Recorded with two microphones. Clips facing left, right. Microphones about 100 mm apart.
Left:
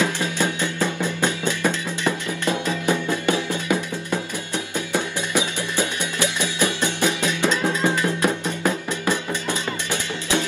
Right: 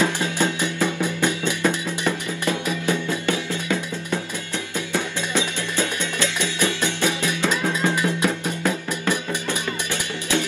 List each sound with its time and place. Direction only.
0.0 s music: 20° right (ahead or behind)
1.2 s music: 15° left (ahead or behind)